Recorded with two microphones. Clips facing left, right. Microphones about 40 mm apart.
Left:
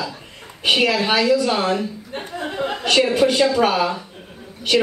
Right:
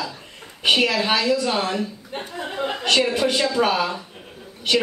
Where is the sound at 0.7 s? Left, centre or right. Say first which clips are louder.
Left 1 dB; centre.